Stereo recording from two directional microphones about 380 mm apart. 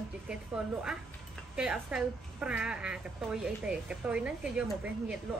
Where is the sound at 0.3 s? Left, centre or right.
Centre.